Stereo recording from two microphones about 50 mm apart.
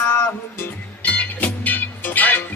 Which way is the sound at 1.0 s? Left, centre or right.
Left.